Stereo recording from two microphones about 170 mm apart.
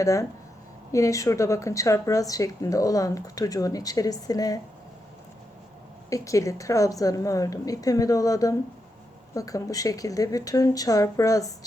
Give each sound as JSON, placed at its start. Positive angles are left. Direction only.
{"t": 0.0, "sound": "speech", "side_deg": 20}
{"t": 6.1, "sound": "speech", "side_deg": 20}